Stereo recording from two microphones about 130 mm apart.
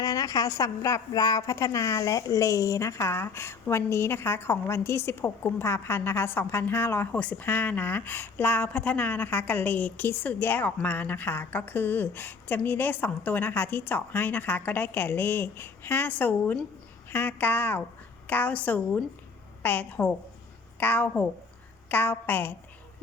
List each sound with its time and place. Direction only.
0.0 s a woman's voice: 25° left (ahead or behind)